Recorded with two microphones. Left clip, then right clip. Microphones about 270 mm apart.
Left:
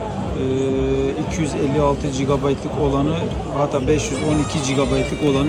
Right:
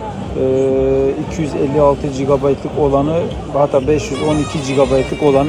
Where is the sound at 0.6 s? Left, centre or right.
Centre.